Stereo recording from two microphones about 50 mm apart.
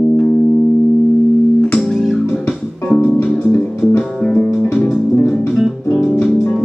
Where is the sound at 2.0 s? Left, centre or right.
Centre.